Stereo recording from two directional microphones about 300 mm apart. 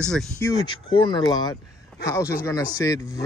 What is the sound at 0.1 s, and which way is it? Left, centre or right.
Speech, centre.